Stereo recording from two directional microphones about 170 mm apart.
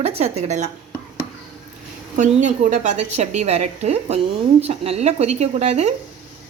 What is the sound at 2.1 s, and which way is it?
A woman's voice, 50° right (ahead or behind).